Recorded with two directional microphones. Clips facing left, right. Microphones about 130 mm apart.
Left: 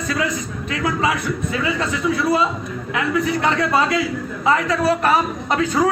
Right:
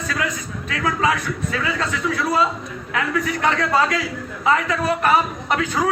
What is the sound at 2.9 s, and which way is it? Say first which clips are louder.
A man's voice: left 3 dB; 25° left (ahead or behind).